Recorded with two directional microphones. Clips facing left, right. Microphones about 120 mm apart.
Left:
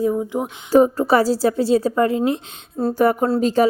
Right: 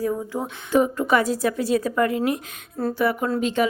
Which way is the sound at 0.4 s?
35° left (ahead or behind).